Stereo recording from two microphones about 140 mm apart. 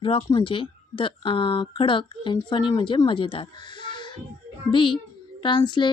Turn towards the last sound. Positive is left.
turn(degrees=35)  # may be behind; listen again after turning